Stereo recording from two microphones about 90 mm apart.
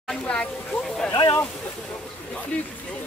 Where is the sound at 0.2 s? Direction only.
10° left (ahead or behind).